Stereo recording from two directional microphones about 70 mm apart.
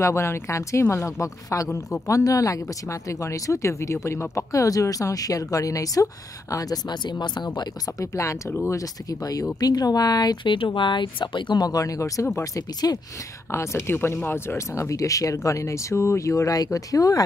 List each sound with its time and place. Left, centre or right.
0.0 s speech: left
8.0 s speech: left
11.3 s speech: left
13.5 s speech: left
16.5 s speech: left